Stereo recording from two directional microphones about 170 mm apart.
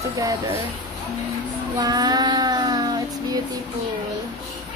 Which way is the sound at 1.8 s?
25° right (ahead or behind).